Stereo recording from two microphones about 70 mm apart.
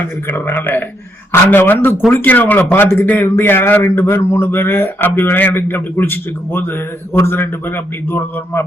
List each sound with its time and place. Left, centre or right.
0.0 s a man's voice: left